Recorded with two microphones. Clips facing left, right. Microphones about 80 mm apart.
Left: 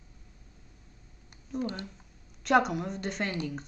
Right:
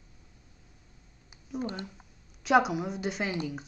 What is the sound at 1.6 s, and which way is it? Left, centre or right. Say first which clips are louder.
Speech: left 1 dB; right.